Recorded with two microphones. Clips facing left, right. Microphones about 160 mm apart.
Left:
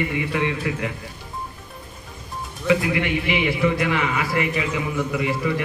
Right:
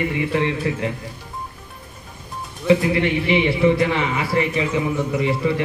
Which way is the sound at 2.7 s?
30° right (ahead or behind).